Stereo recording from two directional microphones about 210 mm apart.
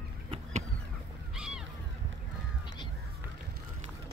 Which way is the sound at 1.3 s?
5° right (ahead or behind).